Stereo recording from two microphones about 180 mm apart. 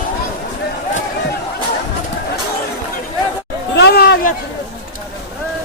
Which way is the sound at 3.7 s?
65° left (ahead or behind).